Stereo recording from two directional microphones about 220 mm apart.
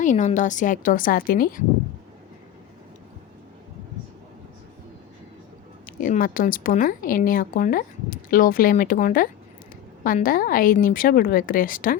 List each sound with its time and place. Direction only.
0.0 s speech: 35° left (ahead or behind)
5.8 s speech: 40° left (ahead or behind)